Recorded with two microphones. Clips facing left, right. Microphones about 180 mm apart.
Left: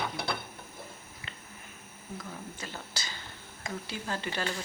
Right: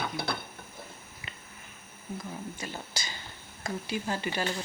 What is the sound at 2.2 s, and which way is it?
Speech, 15° right (ahead or behind).